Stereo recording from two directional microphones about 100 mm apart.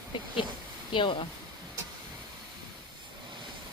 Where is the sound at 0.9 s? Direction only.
55° left (ahead or behind).